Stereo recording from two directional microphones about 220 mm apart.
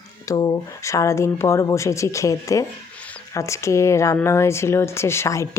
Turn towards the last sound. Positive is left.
turn(degrees=15)  # may be behind; listen again after turning